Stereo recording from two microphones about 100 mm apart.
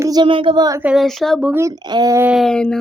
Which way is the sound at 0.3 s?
55° right (ahead or behind).